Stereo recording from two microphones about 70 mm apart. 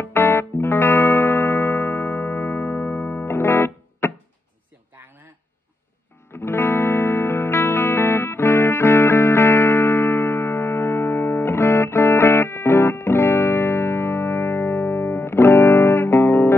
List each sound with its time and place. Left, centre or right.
0.0 s music: left
4.9 s a sound: right
6.3 s music: left